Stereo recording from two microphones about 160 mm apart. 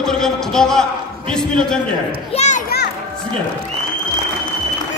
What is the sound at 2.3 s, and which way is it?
Children playing, 45° left (ahead or behind).